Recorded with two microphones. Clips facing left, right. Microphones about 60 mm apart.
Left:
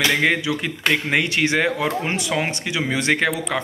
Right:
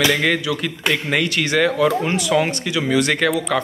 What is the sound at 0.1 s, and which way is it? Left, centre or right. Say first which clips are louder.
Speech: right 1 dB; left.